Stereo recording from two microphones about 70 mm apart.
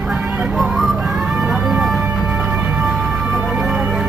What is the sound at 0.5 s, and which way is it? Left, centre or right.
Music, centre.